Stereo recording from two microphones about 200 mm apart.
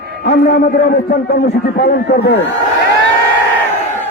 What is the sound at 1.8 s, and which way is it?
Speech, 60° left (ahead or behind).